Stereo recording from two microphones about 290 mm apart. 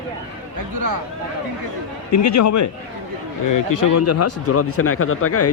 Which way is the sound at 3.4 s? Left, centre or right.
Left.